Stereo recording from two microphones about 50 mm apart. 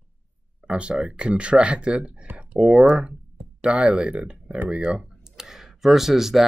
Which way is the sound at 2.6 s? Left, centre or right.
Centre.